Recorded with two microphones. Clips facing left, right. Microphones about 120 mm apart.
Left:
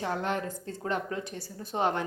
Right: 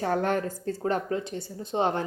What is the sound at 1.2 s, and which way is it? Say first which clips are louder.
Speech: right 4 dB; 25° right (ahead or behind).